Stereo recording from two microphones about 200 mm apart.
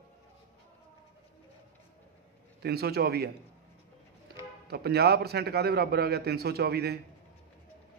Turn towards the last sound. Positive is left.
turn(degrees=-50)  # may be behind; listen again after turning